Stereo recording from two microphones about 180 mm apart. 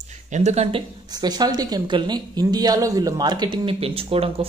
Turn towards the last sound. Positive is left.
turn(degrees=-30)  # may be behind; listen again after turning